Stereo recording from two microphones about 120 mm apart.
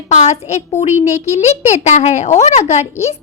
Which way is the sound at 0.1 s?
70° left (ahead or behind).